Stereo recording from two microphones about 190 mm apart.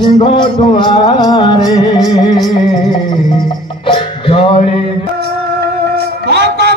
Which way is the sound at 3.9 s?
25° left (ahead or behind).